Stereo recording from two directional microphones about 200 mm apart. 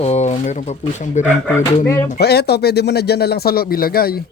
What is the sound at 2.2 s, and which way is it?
Speech, 55° left (ahead or behind).